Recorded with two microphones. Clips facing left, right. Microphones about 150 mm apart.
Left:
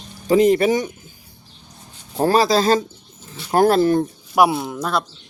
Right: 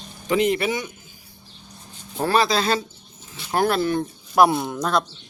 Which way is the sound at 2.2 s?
40° left (ahead or behind).